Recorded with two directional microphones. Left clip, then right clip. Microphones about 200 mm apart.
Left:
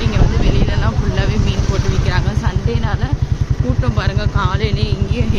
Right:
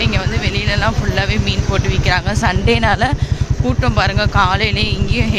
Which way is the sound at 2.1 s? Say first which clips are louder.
Right 7 dB; 20° right (ahead or behind).